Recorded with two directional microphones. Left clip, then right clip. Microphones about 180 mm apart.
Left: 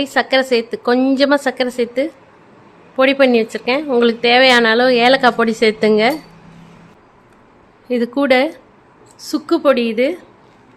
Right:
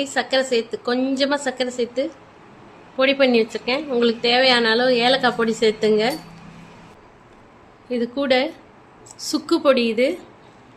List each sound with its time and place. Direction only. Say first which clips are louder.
0.0 s speech: left 6 dB; 40° left (ahead or behind)
7.9 s speech: left 6 dB; 50° left (ahead or behind)
9.1 s a woman's voice: left 3 dB; 25° left (ahead or behind)